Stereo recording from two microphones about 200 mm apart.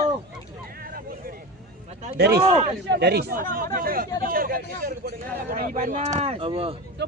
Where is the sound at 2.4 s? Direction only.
30° right (ahead or behind).